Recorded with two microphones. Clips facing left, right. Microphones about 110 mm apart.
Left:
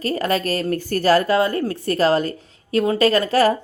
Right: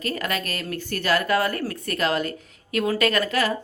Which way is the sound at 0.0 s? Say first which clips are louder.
Left 7 dB; 35° left (ahead or behind).